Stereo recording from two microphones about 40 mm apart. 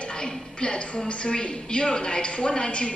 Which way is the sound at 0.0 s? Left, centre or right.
Left.